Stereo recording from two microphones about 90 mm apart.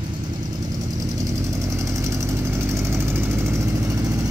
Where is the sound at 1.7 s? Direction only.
35° right (ahead or behind).